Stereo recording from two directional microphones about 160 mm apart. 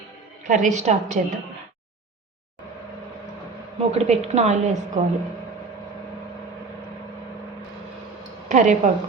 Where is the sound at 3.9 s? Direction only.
40° right (ahead or behind).